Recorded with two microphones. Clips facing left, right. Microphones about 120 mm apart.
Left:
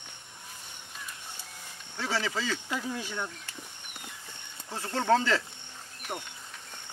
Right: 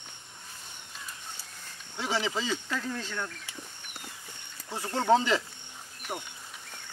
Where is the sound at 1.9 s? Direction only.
15° right (ahead or behind).